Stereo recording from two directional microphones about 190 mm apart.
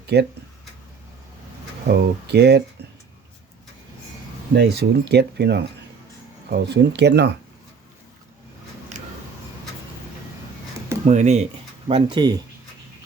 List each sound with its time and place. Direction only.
0.1 s speech: 60° right (ahead or behind)
1.9 s speech: 60° right (ahead or behind)
4.5 s speech: 60° right (ahead or behind)
11.0 s speech: 40° right (ahead or behind)
11.9 s speech: 25° right (ahead or behind)